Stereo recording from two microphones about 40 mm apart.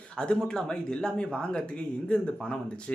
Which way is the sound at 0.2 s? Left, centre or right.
Centre.